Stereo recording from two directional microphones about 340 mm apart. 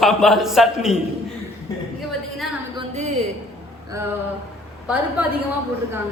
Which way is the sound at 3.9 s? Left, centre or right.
Centre.